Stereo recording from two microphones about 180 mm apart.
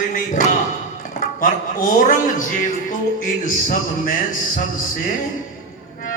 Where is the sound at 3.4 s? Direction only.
50° left (ahead or behind).